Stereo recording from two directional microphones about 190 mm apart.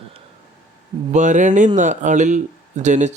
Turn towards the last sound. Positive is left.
turn(degrees=-40)  # may be behind; listen again after turning